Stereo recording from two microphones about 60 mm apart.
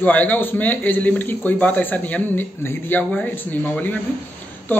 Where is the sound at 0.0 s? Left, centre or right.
Left.